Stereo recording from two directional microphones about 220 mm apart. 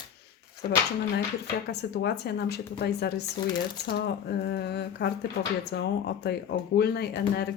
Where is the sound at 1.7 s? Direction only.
50° left (ahead or behind).